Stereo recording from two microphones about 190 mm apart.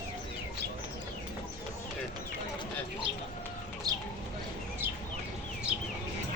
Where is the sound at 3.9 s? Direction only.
20° right (ahead or behind).